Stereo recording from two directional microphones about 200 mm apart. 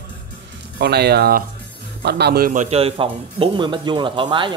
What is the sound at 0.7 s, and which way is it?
A man's voice, 55° right (ahead or behind).